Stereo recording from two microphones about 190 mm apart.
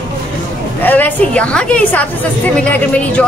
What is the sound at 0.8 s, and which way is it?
A woman's voice, 10° left (ahead or behind).